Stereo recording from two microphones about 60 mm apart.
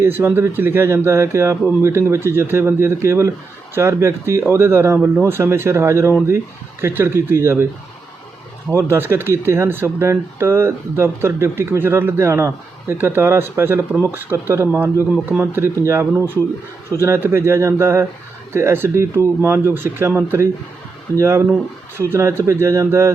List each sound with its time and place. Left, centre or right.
0.0 s speech: right
8.7 s speech: right